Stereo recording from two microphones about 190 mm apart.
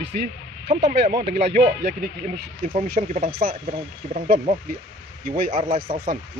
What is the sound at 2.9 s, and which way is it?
Speech, 55° right (ahead or behind).